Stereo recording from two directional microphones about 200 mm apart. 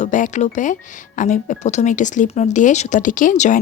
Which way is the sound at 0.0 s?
40° left (ahead or behind).